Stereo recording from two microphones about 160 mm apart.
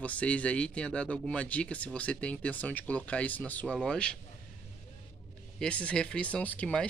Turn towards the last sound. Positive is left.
turn(degrees=10)  # may be behind; listen again after turning